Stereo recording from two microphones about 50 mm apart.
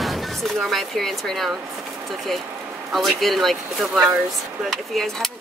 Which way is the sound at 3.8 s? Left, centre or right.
Centre.